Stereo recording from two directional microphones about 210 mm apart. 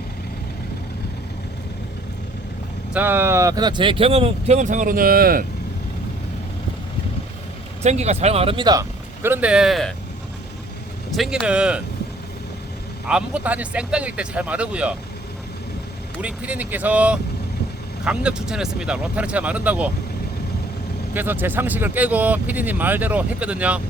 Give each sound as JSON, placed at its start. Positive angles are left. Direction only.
{"t": 2.9, "sound": "speech", "side_deg": -10}
{"t": 7.8, "sound": "speech", "side_deg": -30}
{"t": 11.1, "sound": "speech", "side_deg": 0}
{"t": 13.1, "sound": "speech", "side_deg": -5}
{"t": 16.2, "sound": "speech", "side_deg": -5}
{"t": 21.1, "sound": "speech", "side_deg": -10}